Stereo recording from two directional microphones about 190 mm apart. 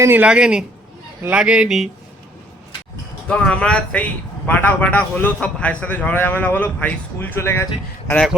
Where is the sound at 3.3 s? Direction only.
5° left (ahead or behind).